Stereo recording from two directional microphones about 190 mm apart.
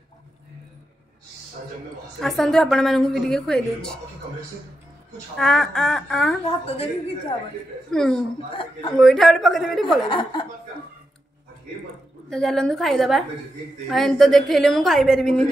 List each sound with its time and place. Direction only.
2.1 s a woman's voice: centre (ahead or behind)
5.4 s a woman's voice: 5° left (ahead or behind)
6.4 s a woman's voice: 30° left (ahead or behind)
7.9 s a woman's voice: 5° left (ahead or behind)
10.0 s speech: 25° left (ahead or behind)
12.3 s a woman's voice: centre (ahead or behind)